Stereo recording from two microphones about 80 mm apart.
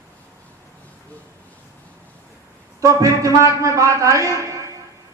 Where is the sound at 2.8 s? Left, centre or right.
Right.